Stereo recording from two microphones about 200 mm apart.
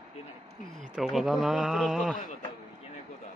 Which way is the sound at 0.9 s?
Centre (ahead or behind).